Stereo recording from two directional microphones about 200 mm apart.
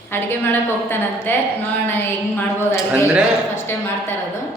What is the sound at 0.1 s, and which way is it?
A woman's voice, 10° left (ahead or behind).